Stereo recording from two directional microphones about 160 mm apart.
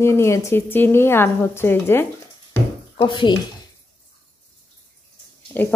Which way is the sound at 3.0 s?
30° left (ahead or behind).